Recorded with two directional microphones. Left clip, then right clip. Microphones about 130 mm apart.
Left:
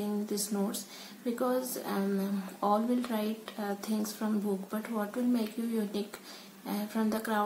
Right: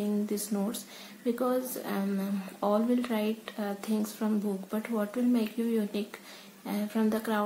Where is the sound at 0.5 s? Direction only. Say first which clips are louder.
Right 1 dB; 20° right (ahead or behind).